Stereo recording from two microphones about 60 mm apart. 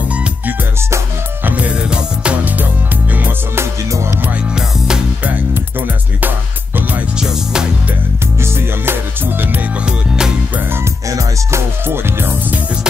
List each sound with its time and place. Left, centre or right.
0.1 s music: right
1.9 s music: centre
3.9 s music: right
4.6 s music: centre
6.2 s music: right
7.2 s music: centre
8.4 s music: right
9.8 s music: centre
11.1 s music: right
11.8 s music: right